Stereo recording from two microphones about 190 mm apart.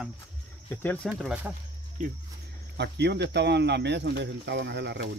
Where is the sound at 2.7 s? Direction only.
65° right (ahead or behind).